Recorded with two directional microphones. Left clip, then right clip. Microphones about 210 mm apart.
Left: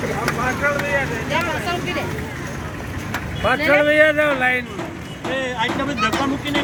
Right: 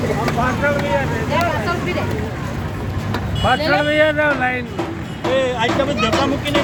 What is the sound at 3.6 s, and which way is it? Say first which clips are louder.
Speech: left 4 dB; 55° left (ahead or behind).